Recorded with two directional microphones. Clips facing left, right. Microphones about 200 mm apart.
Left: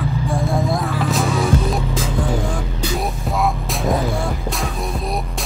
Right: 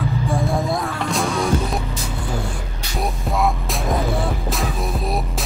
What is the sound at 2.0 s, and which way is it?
Music, 90° left.